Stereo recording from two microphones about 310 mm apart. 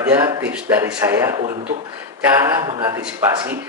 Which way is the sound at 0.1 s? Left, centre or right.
Centre.